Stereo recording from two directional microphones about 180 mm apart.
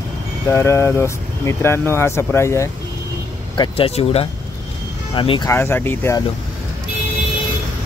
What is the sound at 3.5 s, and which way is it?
Speech, 30° left (ahead or behind).